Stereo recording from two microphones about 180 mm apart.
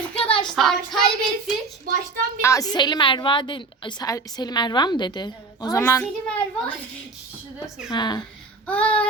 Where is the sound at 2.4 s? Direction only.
20° left (ahead or behind).